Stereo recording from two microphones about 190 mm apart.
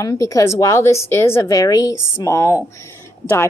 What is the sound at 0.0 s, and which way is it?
Speech, 15° left (ahead or behind).